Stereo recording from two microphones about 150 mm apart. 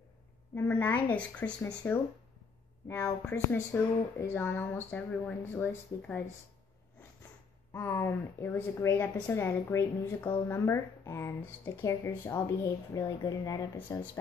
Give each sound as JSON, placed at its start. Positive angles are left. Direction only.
{"t": 0.6, "sound": "a woman's voice", "side_deg": 10}
{"t": 2.9, "sound": "a woman's voice", "side_deg": 15}
{"t": 7.7, "sound": "a woman's voice", "side_deg": 15}